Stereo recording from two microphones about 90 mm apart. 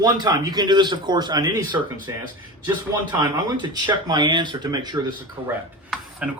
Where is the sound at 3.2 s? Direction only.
50° right (ahead or behind).